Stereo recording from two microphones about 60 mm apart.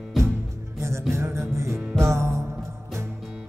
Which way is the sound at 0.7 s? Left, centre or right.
Right.